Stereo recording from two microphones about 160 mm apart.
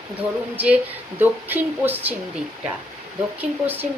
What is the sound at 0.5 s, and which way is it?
Speech, 10° right (ahead or behind).